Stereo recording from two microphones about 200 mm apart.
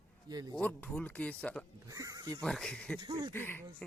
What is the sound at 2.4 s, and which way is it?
Speech, 5° left (ahead or behind).